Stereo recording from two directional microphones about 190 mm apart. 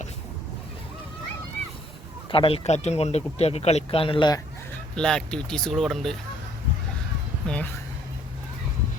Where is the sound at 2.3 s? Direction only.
30° left (ahead or behind).